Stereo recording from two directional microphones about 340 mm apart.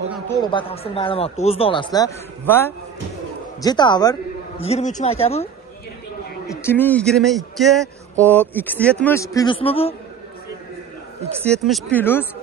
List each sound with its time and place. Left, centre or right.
0.4 s speech: centre
6.4 s a man's voice: centre
11.4 s a man's voice: centre